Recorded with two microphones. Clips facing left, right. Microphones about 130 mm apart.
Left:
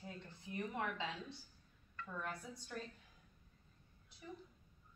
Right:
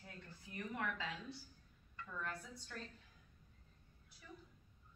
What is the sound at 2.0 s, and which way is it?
Speech, 15° left (ahead or behind).